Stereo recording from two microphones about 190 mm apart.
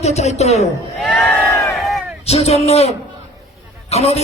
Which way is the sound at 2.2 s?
35° left (ahead or behind).